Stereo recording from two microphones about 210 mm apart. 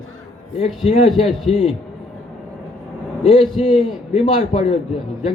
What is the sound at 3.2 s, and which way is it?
A man's voice, 25° left (ahead or behind).